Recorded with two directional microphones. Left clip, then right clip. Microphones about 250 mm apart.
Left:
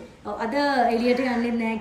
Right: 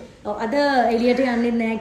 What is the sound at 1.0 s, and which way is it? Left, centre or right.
Speech, right.